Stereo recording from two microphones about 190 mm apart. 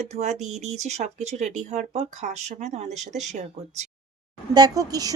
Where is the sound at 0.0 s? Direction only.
35° right (ahead or behind).